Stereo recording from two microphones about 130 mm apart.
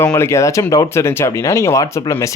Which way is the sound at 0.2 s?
20° left (ahead or behind).